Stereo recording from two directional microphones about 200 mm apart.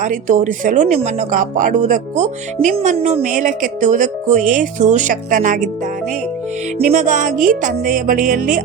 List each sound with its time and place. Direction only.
0.0 s speech: 40° right (ahead or behind)
6.7 s speech: 40° right (ahead or behind)
7.9 s music: 45° right (ahead or behind)